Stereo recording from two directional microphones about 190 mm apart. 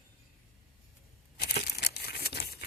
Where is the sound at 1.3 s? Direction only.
60° left (ahead or behind).